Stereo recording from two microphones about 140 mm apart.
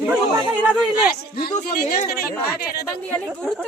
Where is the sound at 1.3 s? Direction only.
90° left.